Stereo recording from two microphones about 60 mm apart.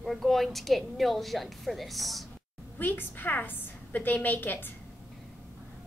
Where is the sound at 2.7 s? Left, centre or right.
Left.